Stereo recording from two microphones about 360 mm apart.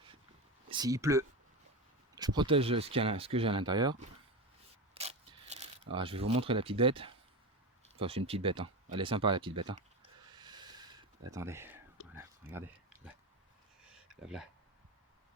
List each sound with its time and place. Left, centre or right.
0.7 s speech: centre
4.9 s mechanisms: centre
5.9 s speech: centre
10.3 s a sound: centre
11.3 s speech: centre
12.1 s a sound: centre
14.2 s speech: centre